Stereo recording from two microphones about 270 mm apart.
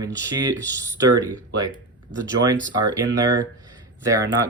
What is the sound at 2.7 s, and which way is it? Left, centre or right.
Speech, centre.